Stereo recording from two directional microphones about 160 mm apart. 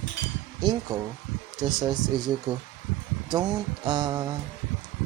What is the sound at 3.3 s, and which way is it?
Speech, 25° right (ahead or behind).